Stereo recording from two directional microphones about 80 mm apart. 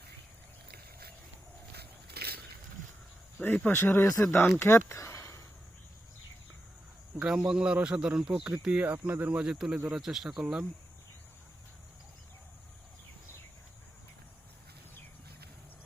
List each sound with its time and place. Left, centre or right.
3.3 s speech: centre; by 4.4 s left
4.6 s a sound: left
7.2 s speech: centre
9.4 s speech: centre